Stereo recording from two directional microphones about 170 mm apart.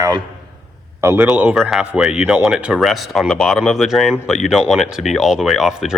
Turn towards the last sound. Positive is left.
turn(degrees=0)  # may be behind; listen again after turning